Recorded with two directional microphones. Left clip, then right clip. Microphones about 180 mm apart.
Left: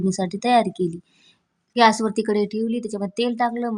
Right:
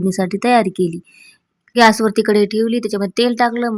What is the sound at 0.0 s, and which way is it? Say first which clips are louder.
Speech: right 6 dB; 20° right (ahead or behind).